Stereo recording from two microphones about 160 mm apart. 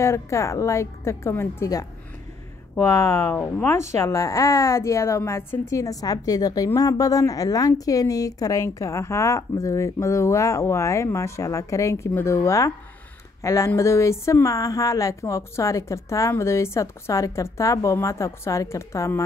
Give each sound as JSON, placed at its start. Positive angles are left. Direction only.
{"t": 0.0, "sound": "a woman's voice", "side_deg": 15}